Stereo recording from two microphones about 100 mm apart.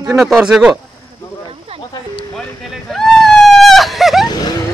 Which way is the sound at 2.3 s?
Centre (ahead or behind).